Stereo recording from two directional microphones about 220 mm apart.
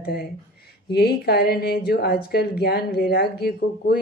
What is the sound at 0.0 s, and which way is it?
A woman's voice, 45° left (ahead or behind).